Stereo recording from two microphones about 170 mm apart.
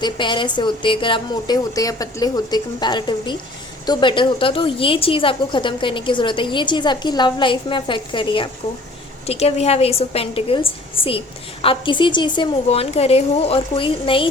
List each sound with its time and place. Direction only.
0.0 s a woman's voice: 30° left (ahead or behind)